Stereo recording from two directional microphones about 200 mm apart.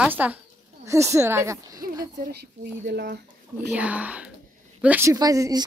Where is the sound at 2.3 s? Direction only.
55° right (ahead or behind).